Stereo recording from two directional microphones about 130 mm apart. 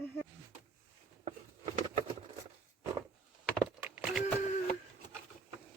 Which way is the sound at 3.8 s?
15° right (ahead or behind).